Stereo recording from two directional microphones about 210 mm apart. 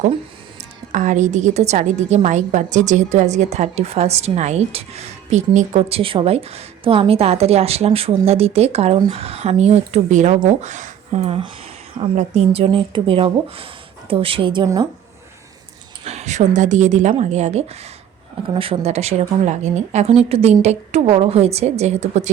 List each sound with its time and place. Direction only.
0.9 s a woman's voice: 35° right (ahead or behind); by 14.8 s 20° right (ahead or behind)
16.0 s a woman's voice: 30° right (ahead or behind)